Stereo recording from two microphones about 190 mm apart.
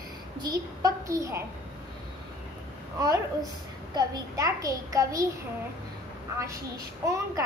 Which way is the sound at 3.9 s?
20° right (ahead or behind).